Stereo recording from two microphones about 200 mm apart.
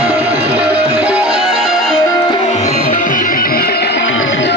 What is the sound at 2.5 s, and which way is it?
Music, 35° left (ahead or behind).